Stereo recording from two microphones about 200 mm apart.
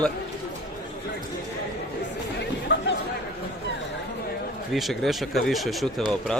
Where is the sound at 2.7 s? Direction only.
65° left (ahead or behind).